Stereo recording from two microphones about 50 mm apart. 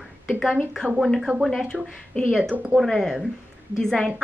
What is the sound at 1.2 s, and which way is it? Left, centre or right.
Speech, centre.